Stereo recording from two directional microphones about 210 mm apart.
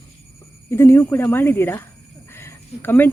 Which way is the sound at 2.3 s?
10° left (ahead or behind).